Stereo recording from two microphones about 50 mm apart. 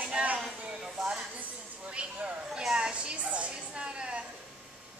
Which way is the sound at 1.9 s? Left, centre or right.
Right.